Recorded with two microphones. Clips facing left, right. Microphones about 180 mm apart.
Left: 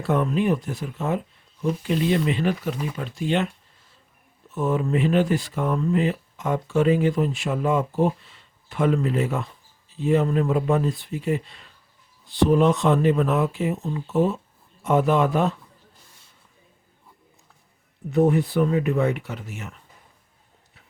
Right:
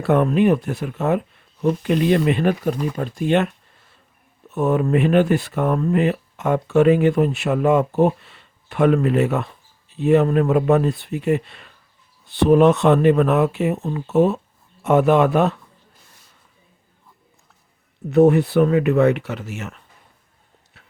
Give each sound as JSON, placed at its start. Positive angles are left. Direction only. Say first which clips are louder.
{"t": 0.0, "sound": "speech", "louder": "right 6 dB", "side_deg": -65}
{"t": 18.1, "sound": "speech", "louder": "right 6 dB", "side_deg": -70}
{"t": 20.8, "sound": "clip-clop", "louder": "right 3 dB", "side_deg": -80}